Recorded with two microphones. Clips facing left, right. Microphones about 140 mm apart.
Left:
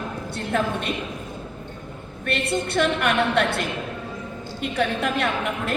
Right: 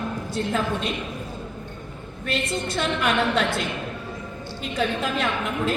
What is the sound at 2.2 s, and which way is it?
A woman's voice, 65° left (ahead or behind).